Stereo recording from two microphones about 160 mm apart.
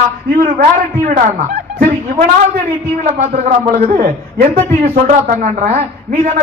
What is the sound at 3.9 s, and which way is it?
Speech, 65° right (ahead or behind).